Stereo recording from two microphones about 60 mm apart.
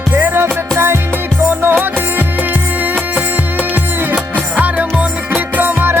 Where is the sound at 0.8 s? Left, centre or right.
Right.